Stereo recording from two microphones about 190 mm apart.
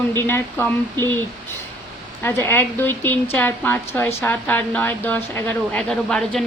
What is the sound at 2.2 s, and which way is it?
Speech, 10° left (ahead or behind).